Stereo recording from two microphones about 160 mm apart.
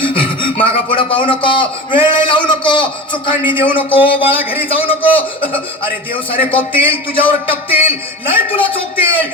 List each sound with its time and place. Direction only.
0.5 s a man's voice: 35° left (ahead or behind)